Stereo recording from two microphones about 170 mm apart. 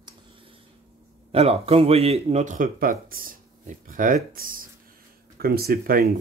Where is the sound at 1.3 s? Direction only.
35° right (ahead or behind).